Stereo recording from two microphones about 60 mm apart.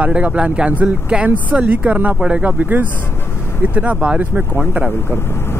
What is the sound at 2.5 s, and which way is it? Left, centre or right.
Speech, right.